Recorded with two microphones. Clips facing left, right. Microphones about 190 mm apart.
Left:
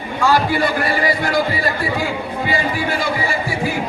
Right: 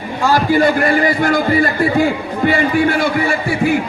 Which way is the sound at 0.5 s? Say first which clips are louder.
Right 6 dB; 50° right (ahead or behind).